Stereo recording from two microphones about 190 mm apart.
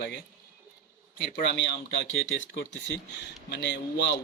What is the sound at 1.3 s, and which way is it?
A man's voice, 65° left (ahead or behind).